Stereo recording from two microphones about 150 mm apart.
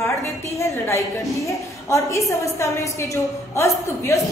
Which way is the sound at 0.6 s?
20° left (ahead or behind).